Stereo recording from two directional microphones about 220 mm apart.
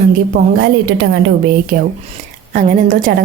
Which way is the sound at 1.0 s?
55° right (ahead or behind).